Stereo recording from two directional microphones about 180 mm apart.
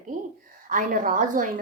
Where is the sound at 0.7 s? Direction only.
45° right (ahead or behind).